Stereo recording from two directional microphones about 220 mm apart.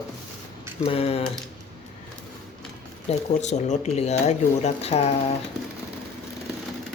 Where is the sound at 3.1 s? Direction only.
30° left (ahead or behind).